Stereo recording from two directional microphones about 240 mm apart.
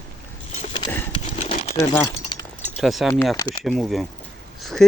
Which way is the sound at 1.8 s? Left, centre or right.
Centre.